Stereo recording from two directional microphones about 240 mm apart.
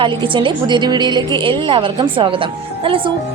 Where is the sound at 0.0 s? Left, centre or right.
Centre.